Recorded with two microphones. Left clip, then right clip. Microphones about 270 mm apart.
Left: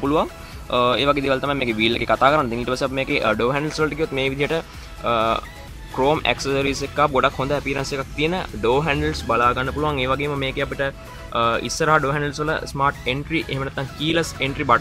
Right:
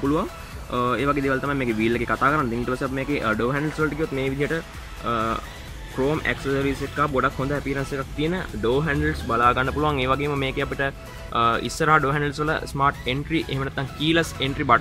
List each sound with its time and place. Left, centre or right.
0.0 s speech: centre